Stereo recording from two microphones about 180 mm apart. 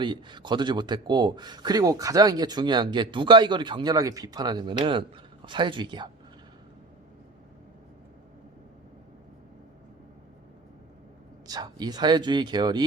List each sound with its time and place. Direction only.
0.0 s speech: 25° right (ahead or behind)
11.4 s speech: 20° right (ahead or behind)